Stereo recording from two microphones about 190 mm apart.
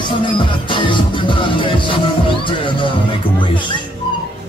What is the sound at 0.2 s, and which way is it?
Music, 25° left (ahead or behind).